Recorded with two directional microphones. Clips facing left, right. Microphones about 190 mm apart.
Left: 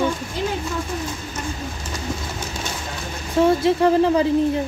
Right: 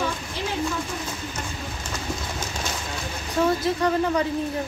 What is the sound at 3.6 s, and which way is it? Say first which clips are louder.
Speech: left 6 dB; 30° left (ahead or behind).